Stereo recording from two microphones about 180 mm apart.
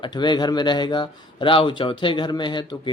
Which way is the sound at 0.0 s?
25° left (ahead or behind).